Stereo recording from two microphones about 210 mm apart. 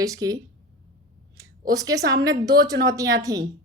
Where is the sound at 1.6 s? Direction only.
15° right (ahead or behind).